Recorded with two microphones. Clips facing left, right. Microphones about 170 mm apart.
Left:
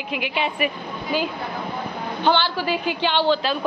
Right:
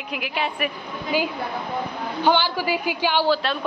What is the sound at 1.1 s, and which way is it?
A woman's voice, 10° right (ahead or behind).